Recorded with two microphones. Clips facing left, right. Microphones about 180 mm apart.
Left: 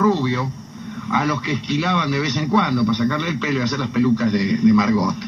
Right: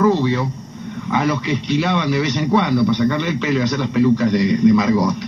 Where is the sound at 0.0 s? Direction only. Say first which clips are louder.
Right 2 dB; 30° right (ahead or behind).